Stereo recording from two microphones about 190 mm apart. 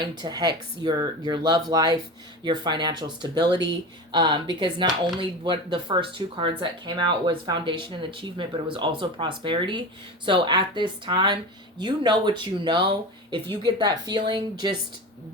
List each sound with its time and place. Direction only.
0.0 s speech: 20° right (ahead or behind)